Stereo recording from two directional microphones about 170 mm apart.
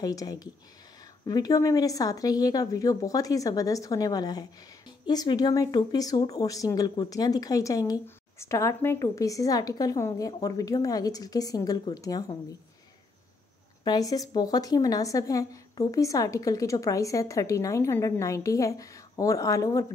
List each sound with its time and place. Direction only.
0.0 s speech: 20° left (ahead or behind)
13.8 s speech: 20° left (ahead or behind)